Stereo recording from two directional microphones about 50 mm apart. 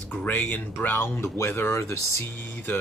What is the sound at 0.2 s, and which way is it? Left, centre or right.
Speech, left.